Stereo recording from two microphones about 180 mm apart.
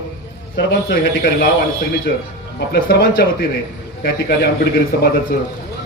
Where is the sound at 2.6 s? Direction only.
70° left (ahead or behind).